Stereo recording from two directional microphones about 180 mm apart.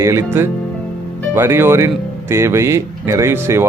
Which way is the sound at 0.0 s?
15° right (ahead or behind).